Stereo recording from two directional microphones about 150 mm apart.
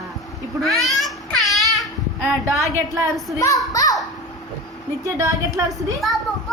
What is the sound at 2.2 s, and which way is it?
Speech, 20° right (ahead or behind).